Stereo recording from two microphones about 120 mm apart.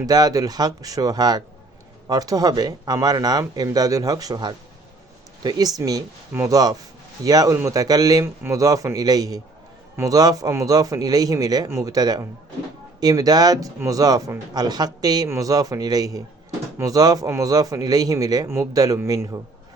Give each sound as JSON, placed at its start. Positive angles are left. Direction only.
{"t": 0.0, "sound": "speech", "side_deg": -30}